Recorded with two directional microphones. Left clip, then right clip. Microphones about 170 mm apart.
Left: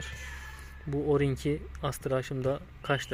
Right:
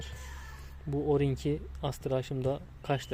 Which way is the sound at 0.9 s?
10° right (ahead or behind).